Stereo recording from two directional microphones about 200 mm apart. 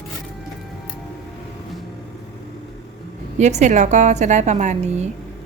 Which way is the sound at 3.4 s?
35° right (ahead or behind).